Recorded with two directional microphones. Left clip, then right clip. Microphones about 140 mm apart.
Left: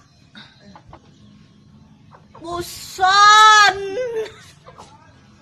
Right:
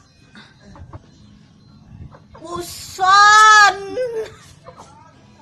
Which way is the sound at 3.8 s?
10° left (ahead or behind).